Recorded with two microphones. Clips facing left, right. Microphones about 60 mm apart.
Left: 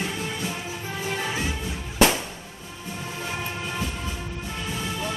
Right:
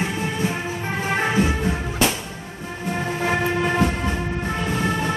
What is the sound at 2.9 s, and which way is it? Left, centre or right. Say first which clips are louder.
Train: right 10 dB; right.